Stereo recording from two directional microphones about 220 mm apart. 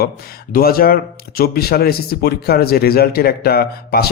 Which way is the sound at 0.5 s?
45° left (ahead or behind).